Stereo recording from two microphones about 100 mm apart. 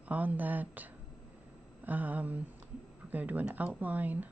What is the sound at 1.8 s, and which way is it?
Speech, 15° right (ahead or behind).